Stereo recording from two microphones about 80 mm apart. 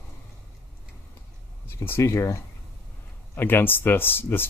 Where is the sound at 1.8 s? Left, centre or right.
Left.